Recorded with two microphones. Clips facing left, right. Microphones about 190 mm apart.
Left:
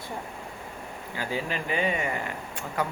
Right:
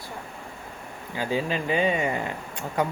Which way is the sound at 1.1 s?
20° right (ahead or behind).